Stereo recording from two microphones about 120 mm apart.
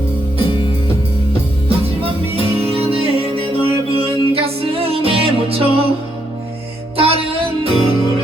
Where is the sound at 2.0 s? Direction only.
55° right (ahead or behind).